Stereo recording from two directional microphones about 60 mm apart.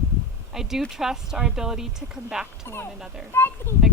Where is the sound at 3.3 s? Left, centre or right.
Left.